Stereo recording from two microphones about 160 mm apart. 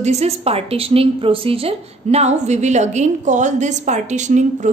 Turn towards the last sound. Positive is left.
turn(degrees=-50)  # may be behind; listen again after turning